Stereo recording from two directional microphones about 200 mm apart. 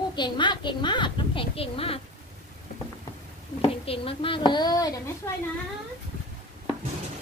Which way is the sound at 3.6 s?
30° left (ahead or behind).